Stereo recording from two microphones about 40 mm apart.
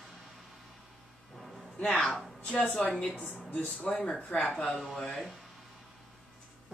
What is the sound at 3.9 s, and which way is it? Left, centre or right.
Speech, centre.